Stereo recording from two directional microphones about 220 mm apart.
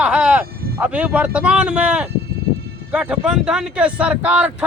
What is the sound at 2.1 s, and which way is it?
Sheep, 45° right (ahead or behind).